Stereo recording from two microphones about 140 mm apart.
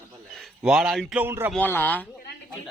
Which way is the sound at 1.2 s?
15° right (ahead or behind).